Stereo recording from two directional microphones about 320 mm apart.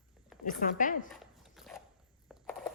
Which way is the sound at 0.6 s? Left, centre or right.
Left.